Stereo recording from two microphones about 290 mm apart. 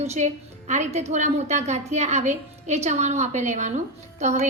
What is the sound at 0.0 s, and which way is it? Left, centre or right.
A woman's voice, right.